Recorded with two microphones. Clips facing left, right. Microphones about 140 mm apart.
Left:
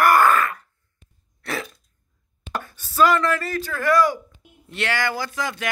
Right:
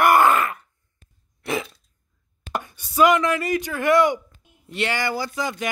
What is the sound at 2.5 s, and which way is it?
Speech, 15° right (ahead or behind).